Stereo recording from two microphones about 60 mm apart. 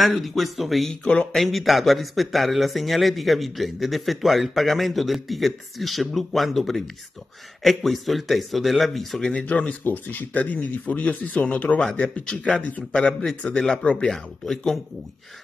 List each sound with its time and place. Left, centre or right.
0.0 s speech: centre
9.2 s speech: centre
11.8 s a man's voice: centre